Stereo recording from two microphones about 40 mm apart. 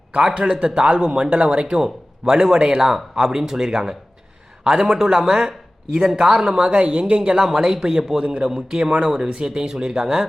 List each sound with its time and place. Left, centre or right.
0.2 s a man's voice: right